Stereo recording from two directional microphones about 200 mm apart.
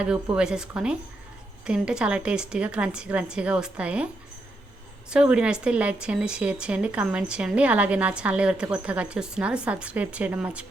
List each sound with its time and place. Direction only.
0.0 s speech: 5° right (ahead or behind)
5.1 s speech: 5° right (ahead or behind)